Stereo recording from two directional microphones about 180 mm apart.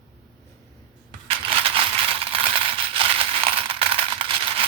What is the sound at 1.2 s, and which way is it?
Coin, 30° right (ahead or behind).